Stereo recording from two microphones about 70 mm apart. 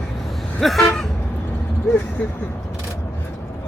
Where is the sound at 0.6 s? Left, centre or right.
Centre.